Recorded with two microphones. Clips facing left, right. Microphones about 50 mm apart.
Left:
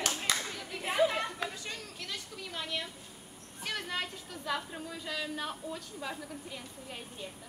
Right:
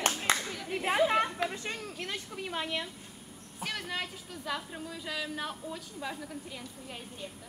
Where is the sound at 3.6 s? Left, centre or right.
Centre.